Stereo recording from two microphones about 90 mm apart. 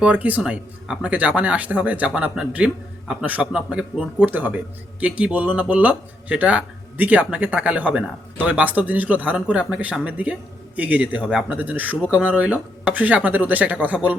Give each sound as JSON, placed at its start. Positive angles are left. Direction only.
{"t": 0.0, "sound": "a man's voice", "side_deg": -15}